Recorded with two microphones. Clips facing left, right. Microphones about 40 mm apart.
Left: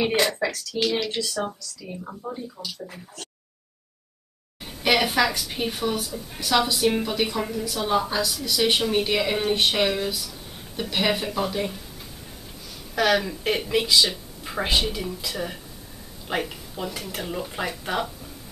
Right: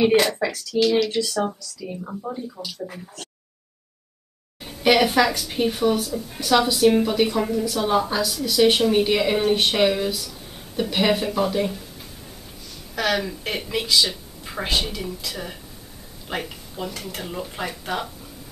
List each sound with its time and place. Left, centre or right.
0.2 s speech: centre
4.6 s speech: centre
12.9 s speech: centre